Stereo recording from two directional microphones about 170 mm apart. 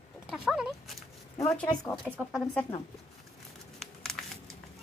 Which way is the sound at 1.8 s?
5° left (ahead or behind).